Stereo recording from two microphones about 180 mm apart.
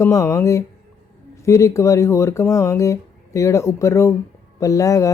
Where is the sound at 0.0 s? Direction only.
15° left (ahead or behind).